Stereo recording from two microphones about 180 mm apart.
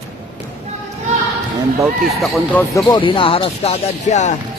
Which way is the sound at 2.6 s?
15° left (ahead or behind).